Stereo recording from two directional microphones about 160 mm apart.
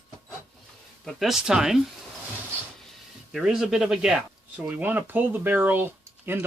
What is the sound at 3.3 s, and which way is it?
Speech, centre (ahead or behind).